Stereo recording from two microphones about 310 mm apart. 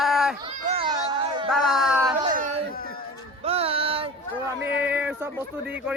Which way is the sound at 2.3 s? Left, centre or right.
Right.